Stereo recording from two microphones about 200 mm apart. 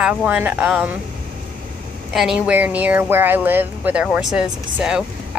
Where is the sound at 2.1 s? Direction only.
Centre (ahead or behind).